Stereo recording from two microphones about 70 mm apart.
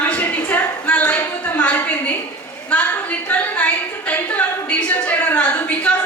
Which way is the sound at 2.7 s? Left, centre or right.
Centre.